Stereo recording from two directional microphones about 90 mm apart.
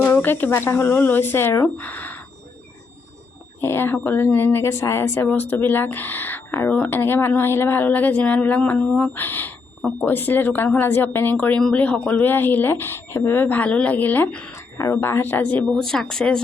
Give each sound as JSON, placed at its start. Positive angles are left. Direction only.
{"t": 0.0, "sound": "speech", "side_deg": 20}
{"t": 3.6, "sound": "speech", "side_deg": 25}
{"t": 14.5, "sound": "speech", "side_deg": 35}
{"t": 15.7, "sound": "speech", "side_deg": 5}